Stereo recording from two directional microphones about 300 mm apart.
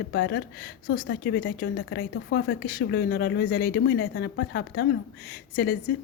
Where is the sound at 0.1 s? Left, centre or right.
Left.